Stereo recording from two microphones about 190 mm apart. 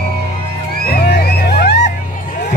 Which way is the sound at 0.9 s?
55° left (ahead or behind).